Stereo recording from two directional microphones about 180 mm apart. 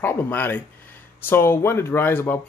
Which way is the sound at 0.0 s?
10° left (ahead or behind).